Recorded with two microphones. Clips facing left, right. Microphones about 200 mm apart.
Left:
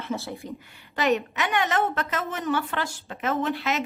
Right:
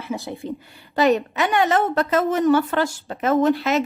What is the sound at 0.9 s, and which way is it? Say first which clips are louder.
A woman's voice: right 6 dB; 35° right (ahead or behind).